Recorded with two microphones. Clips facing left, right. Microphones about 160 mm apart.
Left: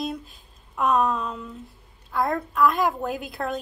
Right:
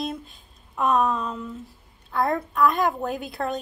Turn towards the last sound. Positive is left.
turn(degrees=0)  # may be behind; listen again after turning